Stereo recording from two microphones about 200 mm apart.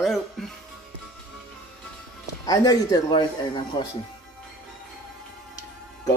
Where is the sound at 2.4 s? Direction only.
20° left (ahead or behind).